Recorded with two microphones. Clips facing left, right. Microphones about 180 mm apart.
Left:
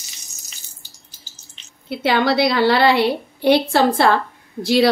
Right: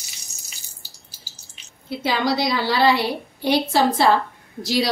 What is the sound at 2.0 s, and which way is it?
A woman's voice, 65° left (ahead or behind).